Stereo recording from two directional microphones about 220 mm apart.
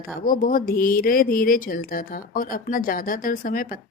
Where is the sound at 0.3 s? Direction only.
40° left (ahead or behind).